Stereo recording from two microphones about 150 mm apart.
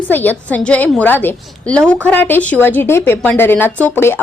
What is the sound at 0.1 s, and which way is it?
Speech, 10° left (ahead or behind).